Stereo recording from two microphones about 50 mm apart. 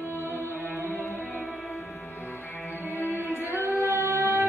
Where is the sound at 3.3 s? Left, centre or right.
Right.